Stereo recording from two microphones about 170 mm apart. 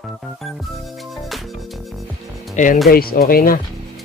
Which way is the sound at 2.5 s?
50° left (ahead or behind).